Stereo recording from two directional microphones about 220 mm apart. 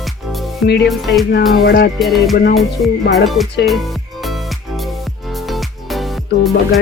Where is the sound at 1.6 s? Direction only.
45° left (ahead or behind).